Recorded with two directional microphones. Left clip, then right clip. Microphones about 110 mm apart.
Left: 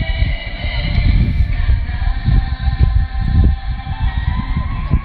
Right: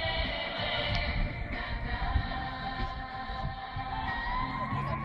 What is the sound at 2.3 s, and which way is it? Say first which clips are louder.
Music: left 7 dB; 40° right (ahead or behind).